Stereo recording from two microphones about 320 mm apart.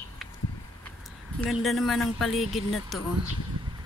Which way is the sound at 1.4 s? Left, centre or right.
Centre.